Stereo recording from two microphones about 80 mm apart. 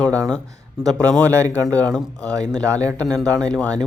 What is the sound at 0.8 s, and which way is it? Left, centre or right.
Speech, centre.